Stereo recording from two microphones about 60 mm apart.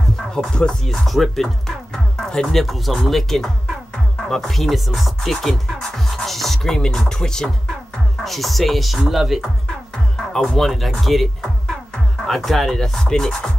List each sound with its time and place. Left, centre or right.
0.3 s speech: centre
2.1 s music: centre
2.6 s speech: centre
10.1 s speech: centre